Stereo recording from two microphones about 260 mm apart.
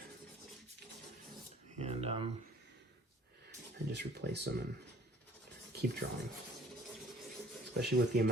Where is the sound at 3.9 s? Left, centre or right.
Right.